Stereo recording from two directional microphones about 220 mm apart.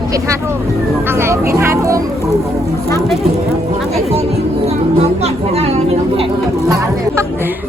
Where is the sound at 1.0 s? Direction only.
10° right (ahead or behind).